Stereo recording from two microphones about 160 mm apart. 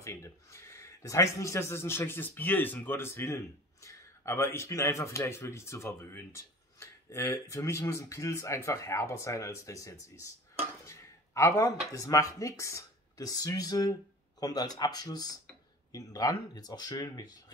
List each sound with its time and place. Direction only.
0.0 s speech: 15° left (ahead or behind)
10.9 s a sound: 20° left (ahead or behind)
11.9 s speech: 20° left (ahead or behind)